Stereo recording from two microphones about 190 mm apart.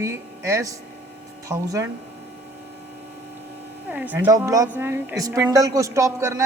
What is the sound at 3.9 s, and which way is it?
A woman's voice, 10° right (ahead or behind).